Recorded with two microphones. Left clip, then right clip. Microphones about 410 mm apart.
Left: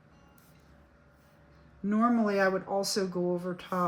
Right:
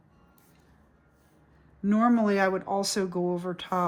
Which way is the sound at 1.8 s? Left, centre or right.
Right.